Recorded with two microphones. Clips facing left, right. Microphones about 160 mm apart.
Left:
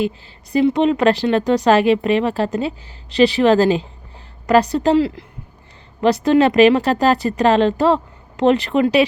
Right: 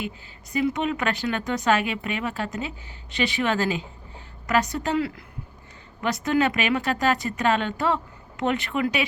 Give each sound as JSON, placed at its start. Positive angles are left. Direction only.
{"t": 0.5, "sound": "speech", "side_deg": 30}